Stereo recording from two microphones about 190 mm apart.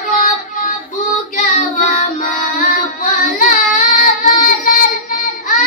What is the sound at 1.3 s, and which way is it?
Child singing, 40° left (ahead or behind).